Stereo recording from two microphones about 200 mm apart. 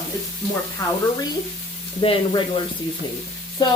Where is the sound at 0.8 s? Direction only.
20° left (ahead or behind).